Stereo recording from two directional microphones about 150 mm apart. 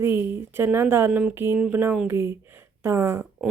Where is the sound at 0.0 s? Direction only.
15° right (ahead or behind).